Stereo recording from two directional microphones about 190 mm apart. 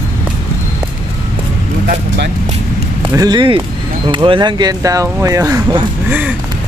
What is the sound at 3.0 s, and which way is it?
Speech, 25° right (ahead or behind).